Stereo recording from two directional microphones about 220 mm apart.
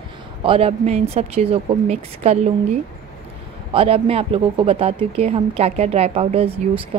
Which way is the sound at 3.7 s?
25° right (ahead or behind).